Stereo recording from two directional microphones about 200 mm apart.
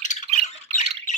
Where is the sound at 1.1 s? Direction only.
40° left (ahead or behind).